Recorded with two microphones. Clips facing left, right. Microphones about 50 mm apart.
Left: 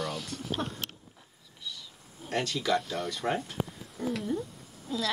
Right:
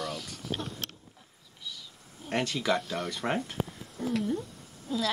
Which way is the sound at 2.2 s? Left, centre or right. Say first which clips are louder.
Right 1 dB; right.